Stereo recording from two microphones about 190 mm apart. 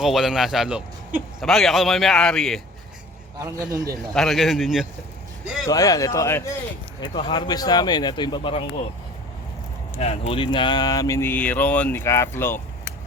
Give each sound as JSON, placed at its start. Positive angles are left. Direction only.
{"t": 0.0, "sound": "a man's voice", "side_deg": 0}
{"t": 3.3, "sound": "a man's voice", "side_deg": -20}
{"t": 4.1, "sound": "a man's voice", "side_deg": 0}
{"t": 5.6, "sound": "speech", "side_deg": 20}
{"t": 7.0, "sound": "speech", "side_deg": 25}
{"t": 10.0, "sound": "speech", "side_deg": 30}